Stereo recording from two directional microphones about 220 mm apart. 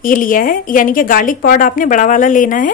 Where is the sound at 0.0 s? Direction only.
40° left (ahead or behind).